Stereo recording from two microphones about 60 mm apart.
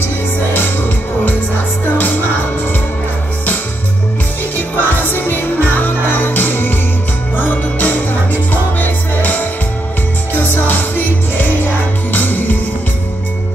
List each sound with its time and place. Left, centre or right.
4.6 s music: left